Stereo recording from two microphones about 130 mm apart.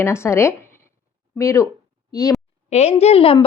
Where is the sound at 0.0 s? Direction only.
20° left (ahead or behind).